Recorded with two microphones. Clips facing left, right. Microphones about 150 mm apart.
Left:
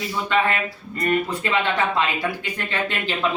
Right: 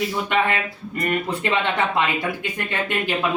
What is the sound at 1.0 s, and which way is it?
Speech, 20° right (ahead or behind).